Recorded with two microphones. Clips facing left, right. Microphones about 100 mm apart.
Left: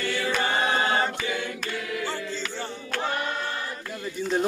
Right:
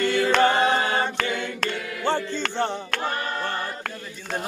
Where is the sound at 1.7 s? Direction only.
25° right (ahead or behind).